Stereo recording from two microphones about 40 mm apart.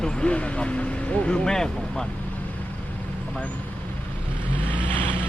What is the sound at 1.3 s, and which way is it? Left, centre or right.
Speech, centre.